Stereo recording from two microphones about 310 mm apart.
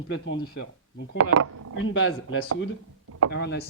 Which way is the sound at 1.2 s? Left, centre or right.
Right.